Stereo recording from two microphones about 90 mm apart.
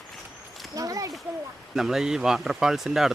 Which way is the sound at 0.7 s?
40° right (ahead or behind).